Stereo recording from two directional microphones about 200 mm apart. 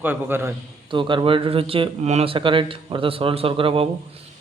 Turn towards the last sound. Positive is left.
turn(degrees=-25)  # may be behind; listen again after turning